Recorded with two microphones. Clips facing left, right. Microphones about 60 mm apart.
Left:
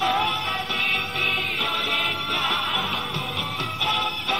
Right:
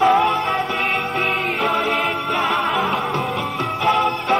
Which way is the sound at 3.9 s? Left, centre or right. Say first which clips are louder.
Right 9 dB; right.